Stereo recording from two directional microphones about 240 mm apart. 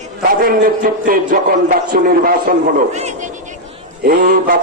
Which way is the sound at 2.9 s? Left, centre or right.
Right.